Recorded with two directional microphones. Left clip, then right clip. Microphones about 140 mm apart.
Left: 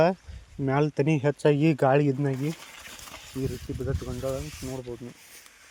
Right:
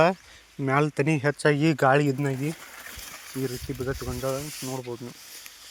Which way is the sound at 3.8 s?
5° right (ahead or behind).